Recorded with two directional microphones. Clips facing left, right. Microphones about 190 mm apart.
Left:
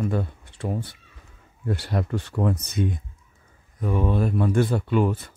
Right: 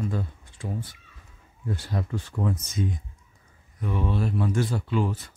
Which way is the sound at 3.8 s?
45° left (ahead or behind).